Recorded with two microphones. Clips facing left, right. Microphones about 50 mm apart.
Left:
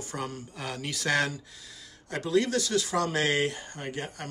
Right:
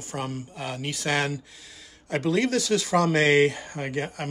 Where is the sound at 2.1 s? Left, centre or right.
Right.